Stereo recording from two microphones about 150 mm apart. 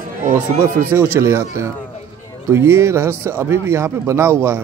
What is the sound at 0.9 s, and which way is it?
Speech, 15° right (ahead or behind).